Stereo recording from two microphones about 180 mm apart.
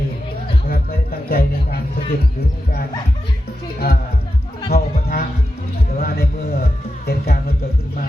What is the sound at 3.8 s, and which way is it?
A man's voice, 55° left (ahead or behind).